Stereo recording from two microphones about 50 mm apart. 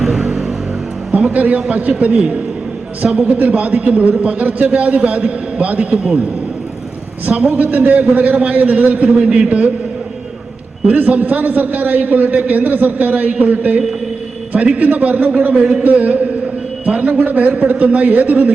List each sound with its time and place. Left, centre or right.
0.0 s a sound: centre
1.1 s a man's voice: right
7.3 s a man's voice: right
10.8 s a man's voice: right